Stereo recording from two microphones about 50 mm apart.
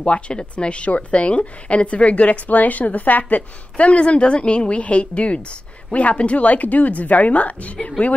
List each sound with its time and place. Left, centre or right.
0.0 s speech: left